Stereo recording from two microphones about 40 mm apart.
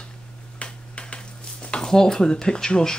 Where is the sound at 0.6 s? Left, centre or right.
Left.